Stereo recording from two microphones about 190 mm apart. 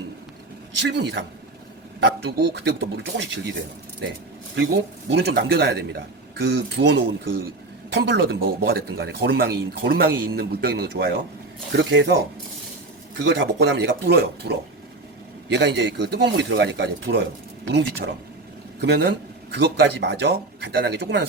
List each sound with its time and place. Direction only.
0.8 s speech: 70° right (ahead or behind)
13.2 s speech: 65° right (ahead or behind)
15.5 s speech: 70° right (ahead or behind)